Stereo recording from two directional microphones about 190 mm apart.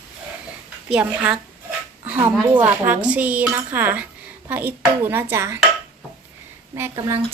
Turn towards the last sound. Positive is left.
turn(degrees=-15)  # may be behind; listen again after turning